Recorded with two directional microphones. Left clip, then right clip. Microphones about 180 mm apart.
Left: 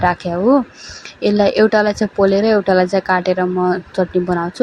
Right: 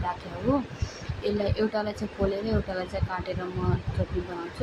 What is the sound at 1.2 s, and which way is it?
Speech, 45° left (ahead or behind).